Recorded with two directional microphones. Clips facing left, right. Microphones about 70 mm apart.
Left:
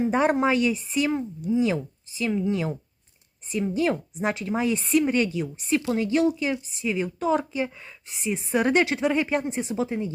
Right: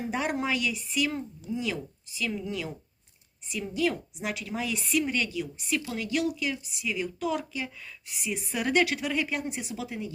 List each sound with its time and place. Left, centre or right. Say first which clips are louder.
0.1 s speech: left 5 dB; left